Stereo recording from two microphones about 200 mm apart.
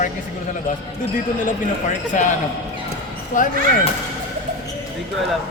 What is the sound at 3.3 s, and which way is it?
Speech, 40° left (ahead or behind).